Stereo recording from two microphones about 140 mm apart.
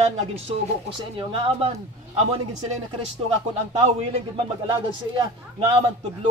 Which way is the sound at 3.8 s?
50° right (ahead or behind).